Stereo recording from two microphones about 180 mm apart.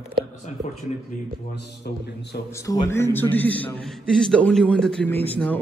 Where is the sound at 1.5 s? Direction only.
65° left (ahead or behind).